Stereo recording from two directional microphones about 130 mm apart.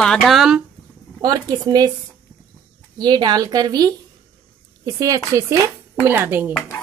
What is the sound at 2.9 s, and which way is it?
A woman's voice, 35° right (ahead or behind).